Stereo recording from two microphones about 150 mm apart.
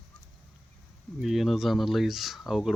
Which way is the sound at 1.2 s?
Centre (ahead or behind).